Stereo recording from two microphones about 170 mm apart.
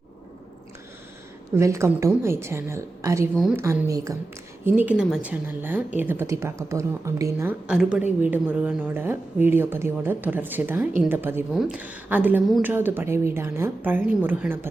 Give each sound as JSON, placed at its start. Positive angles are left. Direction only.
{"t": 1.5, "sound": "a woman's voice", "side_deg": -15}
{"t": 7.7, "sound": "a woman's voice", "side_deg": -5}